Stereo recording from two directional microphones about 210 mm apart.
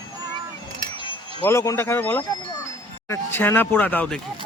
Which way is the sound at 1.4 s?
15° left (ahead or behind).